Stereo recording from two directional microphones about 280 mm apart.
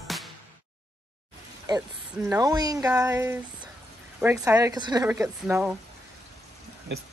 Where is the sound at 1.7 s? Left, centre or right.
Centre.